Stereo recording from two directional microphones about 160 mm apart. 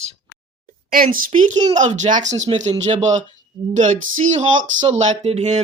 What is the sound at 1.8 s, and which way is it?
Speech, 50° right (ahead or behind).